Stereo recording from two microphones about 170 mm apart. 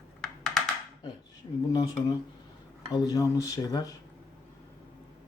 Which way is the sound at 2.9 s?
20° left (ahead or behind).